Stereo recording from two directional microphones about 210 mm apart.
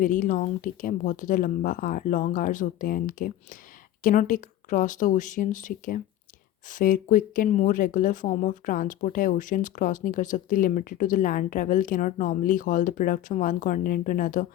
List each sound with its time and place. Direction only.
0.0 s speech: 40° left (ahead or behind)